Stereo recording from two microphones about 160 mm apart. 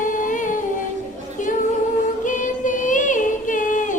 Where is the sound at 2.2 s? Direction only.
55° left (ahead or behind).